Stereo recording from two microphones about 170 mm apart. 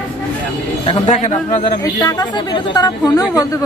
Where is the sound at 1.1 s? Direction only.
45° left (ahead or behind).